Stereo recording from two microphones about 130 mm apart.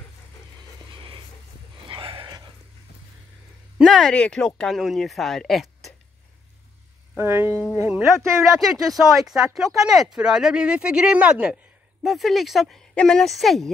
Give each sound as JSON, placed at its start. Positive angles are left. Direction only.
{"t": 0.9, "sound": "music", "side_deg": -40}
{"t": 1.9, "sound": "a sound", "side_deg": -40}
{"t": 3.8, "sound": "speech", "side_deg": 5}
{"t": 7.2, "sound": "speech", "side_deg": -15}
{"t": 8.5, "sound": "speech", "side_deg": 0}